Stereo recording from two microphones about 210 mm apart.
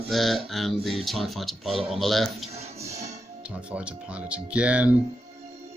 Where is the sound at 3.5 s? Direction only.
5° right (ahead or behind).